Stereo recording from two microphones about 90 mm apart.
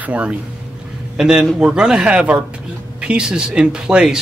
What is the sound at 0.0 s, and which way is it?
Speech, 15° right (ahead or behind).